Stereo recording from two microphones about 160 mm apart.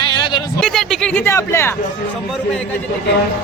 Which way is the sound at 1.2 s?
15° left (ahead or behind).